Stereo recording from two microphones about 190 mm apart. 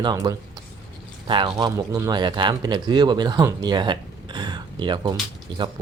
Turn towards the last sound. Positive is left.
turn(degrees=-25)  # may be behind; listen again after turning